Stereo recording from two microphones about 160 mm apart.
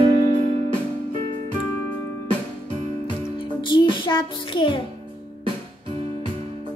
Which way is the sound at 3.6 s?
30° left (ahead or behind).